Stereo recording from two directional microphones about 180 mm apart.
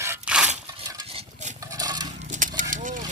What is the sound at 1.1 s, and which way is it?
Stir, 35° right (ahead or behind).